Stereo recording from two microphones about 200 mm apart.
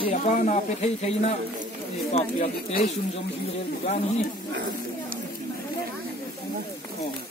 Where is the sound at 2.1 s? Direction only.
30° left (ahead or behind).